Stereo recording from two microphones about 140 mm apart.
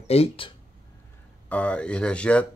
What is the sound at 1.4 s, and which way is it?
Speech, 10° left (ahead or behind).